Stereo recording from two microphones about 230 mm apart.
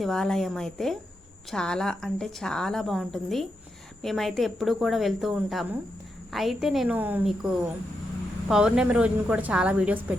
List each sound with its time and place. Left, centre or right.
0.0 s a woman's voice: centre